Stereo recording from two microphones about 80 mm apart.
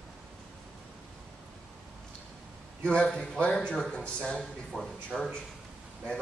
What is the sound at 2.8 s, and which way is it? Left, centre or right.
Speech, centre.